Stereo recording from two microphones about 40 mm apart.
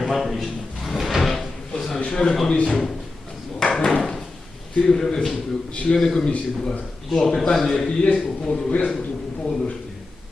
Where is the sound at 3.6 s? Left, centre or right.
Centre.